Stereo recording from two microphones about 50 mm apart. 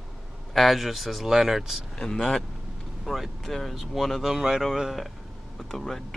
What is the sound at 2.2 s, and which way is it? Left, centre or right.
Speech, centre.